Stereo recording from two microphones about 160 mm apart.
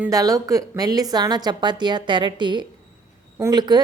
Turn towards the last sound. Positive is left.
turn(degrees=-25)  # may be behind; listen again after turning